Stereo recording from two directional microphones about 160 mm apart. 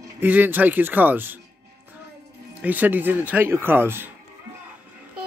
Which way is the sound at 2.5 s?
10° right (ahead or behind).